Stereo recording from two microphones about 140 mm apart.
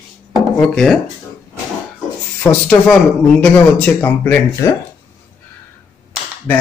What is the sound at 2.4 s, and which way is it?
Speech, 10° left (ahead or behind).